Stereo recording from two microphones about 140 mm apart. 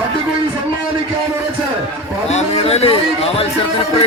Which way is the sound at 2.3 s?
50° left (ahead or behind).